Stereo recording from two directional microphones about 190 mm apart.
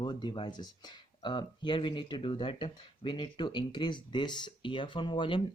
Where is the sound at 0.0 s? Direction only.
25° left (ahead or behind).